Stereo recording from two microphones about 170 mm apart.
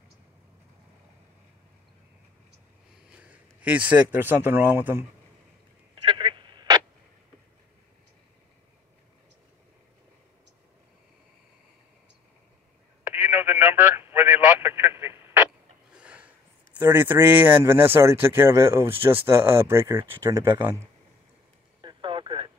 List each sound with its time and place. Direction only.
3.1 s a man's voice: 10° right (ahead or behind)
6.0 s telephone: 30° right (ahead or behind)
13.0 s telephone: 10° right (ahead or behind)
15.9 s a sound: 5° right (ahead or behind)
16.7 s a man's voice: 10° right (ahead or behind)
21.8 s telephone: 30° right (ahead or behind)